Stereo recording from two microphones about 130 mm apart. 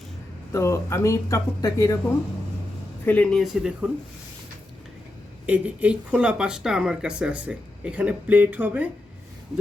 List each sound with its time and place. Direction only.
0.5 s speech: 20° left (ahead or behind)
3.1 s speech: 10° left (ahead or behind)
5.5 s speech: 10° right (ahead or behind)